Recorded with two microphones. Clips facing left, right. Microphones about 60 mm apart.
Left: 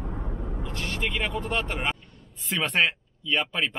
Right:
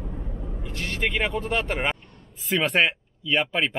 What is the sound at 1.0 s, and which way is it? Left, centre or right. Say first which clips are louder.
Speech: right 4 dB; centre.